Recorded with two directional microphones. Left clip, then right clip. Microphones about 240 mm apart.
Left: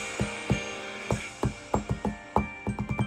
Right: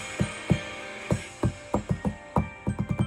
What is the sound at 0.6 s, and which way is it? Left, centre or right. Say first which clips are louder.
Music: left 1 dB; left.